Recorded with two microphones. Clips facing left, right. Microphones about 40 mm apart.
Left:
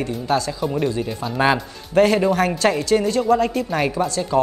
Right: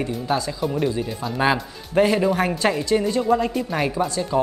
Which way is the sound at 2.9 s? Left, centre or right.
Left.